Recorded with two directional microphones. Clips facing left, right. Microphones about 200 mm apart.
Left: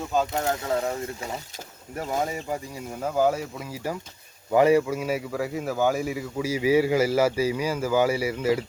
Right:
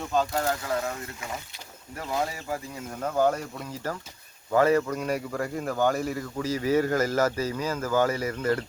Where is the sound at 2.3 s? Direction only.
15° left (ahead or behind).